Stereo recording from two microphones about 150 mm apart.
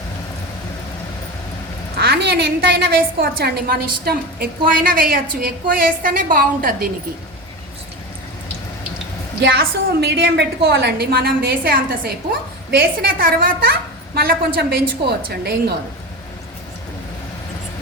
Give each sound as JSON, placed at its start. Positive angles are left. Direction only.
{"t": 2.0, "sound": "a woman's voice", "side_deg": -90}
{"t": 9.5, "sound": "a woman's voice", "side_deg": -90}